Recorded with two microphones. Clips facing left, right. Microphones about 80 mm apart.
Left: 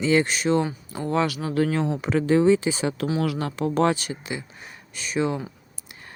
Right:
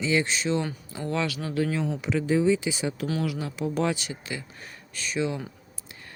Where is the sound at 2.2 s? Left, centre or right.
Left.